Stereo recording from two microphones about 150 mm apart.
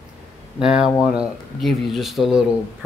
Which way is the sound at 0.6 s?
5° right (ahead or behind).